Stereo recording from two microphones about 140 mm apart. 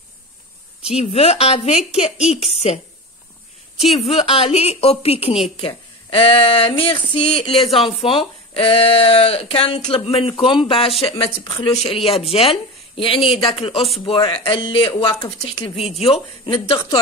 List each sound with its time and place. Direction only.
0.8 s a woman's voice: 45° left (ahead or behind)
4.0 s a woman's voice: 45° left (ahead or behind)